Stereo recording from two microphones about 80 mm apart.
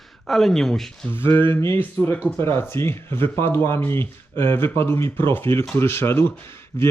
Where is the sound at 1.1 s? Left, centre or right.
Left.